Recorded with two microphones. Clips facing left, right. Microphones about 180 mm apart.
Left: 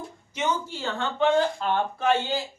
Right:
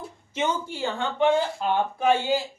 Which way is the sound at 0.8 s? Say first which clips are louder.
Right 4 dB; 15° right (ahead or behind).